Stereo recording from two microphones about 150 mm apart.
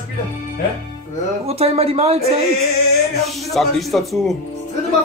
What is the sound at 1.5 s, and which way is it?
Speech, 40° right (ahead or behind).